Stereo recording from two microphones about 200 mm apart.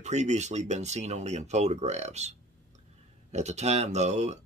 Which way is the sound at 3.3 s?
35° right (ahead or behind).